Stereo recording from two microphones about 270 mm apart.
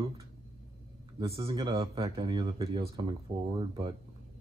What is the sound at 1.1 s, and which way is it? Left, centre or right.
Speech, centre.